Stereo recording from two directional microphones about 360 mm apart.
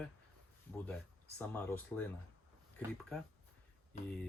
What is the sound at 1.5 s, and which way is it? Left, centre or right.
Speech, centre.